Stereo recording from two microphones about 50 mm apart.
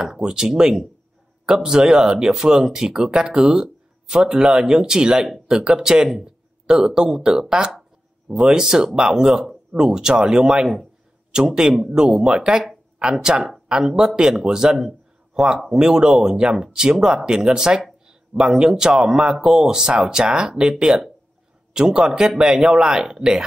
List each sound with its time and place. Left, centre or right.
0.0 s a man's voice: centre
14.9 s a sound: centre
15.8 s speech: centre